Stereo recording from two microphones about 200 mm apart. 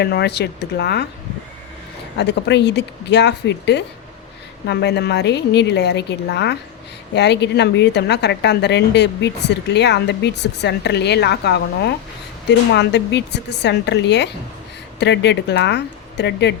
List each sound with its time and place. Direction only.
0.0 s a woman's voice: 55° left (ahead or behind)
2.1 s a woman's voice: 60° left (ahead or behind)